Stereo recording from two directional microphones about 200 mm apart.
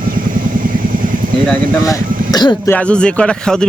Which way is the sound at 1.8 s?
20° left (ahead or behind).